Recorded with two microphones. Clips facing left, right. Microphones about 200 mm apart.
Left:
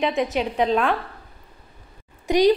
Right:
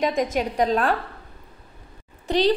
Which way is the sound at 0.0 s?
45° right (ahead or behind).